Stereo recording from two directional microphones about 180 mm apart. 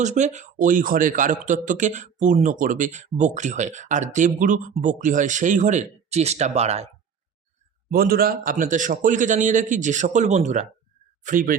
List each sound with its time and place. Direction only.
0.0 s a man's voice: 40° right (ahead or behind)
7.9 s a man's voice: 55° right (ahead or behind)